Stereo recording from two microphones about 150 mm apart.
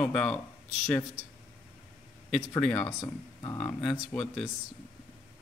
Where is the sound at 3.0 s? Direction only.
30° left (ahead or behind).